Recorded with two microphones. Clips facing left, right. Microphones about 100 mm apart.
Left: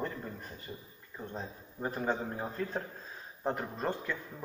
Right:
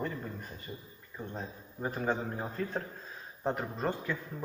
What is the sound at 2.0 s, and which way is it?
A man's voice, centre (ahead or behind).